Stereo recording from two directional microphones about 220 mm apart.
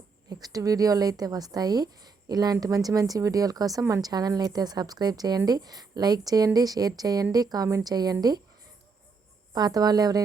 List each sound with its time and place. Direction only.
0.3 s speech: 15° right (ahead or behind)
9.5 s speech: 15° right (ahead or behind)